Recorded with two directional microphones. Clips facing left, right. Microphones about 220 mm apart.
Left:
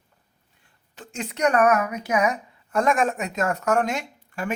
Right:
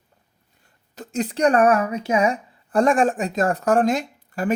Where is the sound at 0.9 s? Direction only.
35° right (ahead or behind).